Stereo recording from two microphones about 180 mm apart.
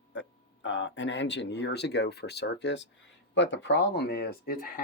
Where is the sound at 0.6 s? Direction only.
90° left.